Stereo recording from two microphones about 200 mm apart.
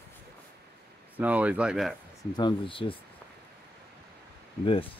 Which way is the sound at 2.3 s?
25° left (ahead or behind).